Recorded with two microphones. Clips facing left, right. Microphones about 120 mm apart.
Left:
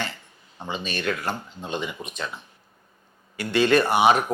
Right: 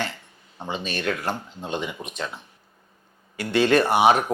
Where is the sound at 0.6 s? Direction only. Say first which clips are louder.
Right 1 dB; 30° right (ahead or behind).